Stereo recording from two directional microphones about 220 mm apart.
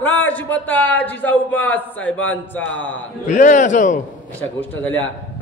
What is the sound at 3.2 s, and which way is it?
Speech, 35° left (ahead or behind).